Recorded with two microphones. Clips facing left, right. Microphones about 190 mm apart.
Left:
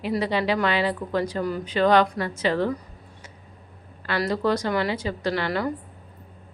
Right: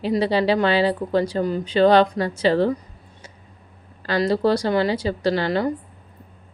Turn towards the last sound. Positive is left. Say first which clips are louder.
# right 5 dB
turn(degrees=-25)  # may be behind; listen again after turning